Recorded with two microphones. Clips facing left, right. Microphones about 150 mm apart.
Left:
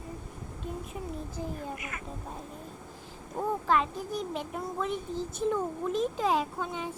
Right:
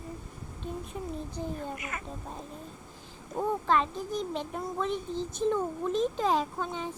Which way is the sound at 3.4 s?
5° left (ahead or behind).